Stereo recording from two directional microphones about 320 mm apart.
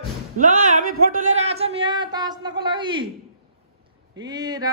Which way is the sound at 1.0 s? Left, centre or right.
Right.